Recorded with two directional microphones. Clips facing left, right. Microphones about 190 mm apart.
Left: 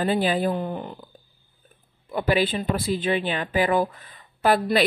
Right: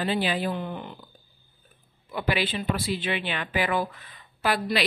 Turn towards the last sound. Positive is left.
turn(degrees=45)  # may be behind; listen again after turning